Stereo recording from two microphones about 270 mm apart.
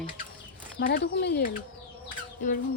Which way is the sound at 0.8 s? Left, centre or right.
Left.